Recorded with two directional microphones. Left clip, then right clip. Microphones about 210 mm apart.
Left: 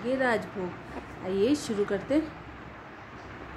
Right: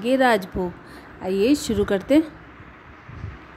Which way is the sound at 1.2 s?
30° right (ahead or behind).